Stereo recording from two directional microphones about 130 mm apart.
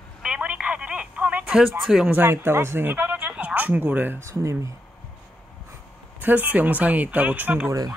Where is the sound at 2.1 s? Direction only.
15° right (ahead or behind).